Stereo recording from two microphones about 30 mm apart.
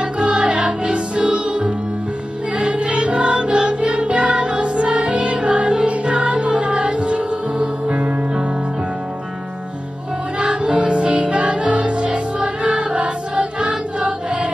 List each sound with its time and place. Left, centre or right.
0.0 s music: right
10.4 s music: right